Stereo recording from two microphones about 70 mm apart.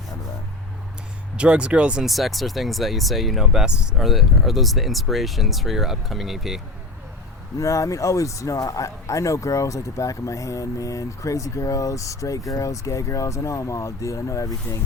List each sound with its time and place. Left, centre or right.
1.4 s speech: centre
2.0 s speech: centre
4.0 s speech: centre
7.6 s speech: left